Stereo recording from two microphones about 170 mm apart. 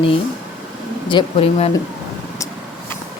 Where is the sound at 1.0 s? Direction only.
30° left (ahead or behind).